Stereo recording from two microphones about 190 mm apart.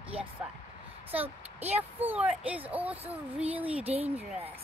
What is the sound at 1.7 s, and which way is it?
Speech, 10° right (ahead or behind).